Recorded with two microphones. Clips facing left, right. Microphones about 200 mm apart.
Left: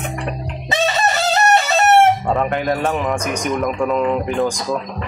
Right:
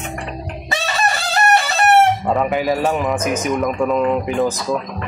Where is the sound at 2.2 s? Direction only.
Centre (ahead or behind).